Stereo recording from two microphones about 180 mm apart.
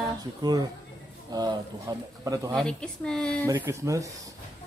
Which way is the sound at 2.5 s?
5° left (ahead or behind).